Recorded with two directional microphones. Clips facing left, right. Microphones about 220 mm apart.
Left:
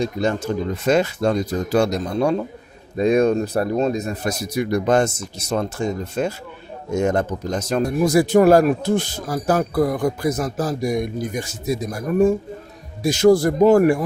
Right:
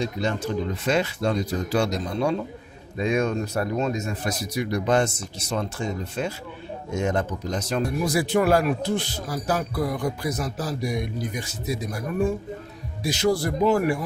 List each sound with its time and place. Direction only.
0.0 s speech: 45° left (ahead or behind)